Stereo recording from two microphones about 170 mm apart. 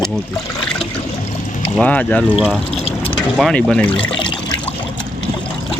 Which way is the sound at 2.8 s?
35° left (ahead or behind).